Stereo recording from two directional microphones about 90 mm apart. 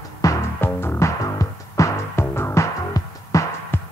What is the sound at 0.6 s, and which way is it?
Music, 25° left (ahead or behind).